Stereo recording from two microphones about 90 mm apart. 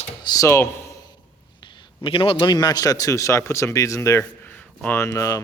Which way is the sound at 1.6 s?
85° left.